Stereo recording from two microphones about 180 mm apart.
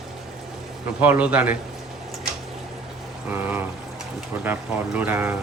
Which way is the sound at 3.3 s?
10° right (ahead or behind).